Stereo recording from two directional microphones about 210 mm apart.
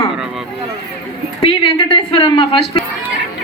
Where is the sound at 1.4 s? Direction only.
25° left (ahead or behind).